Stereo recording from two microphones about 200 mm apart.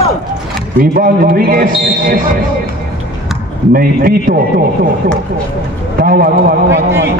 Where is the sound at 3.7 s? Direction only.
45° right (ahead or behind).